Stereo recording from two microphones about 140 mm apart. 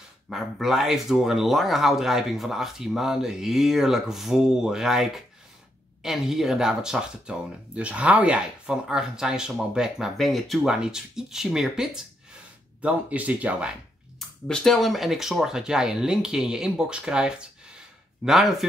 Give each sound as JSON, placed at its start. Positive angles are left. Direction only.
{"t": 0.3, "sound": "speech", "side_deg": 0}
{"t": 14.5, "sound": "speech", "side_deg": 5}